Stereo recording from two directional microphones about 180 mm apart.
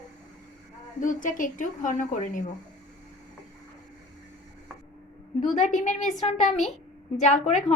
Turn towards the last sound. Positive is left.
turn(degrees=40)  # may be behind; listen again after turning